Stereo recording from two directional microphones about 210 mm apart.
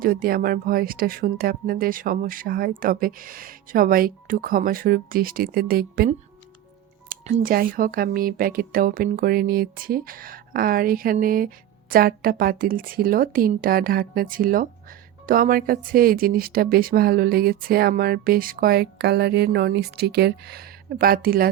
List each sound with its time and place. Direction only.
0.0 s speech: 45° right (ahead or behind)
7.1 s speech: 35° right (ahead or behind)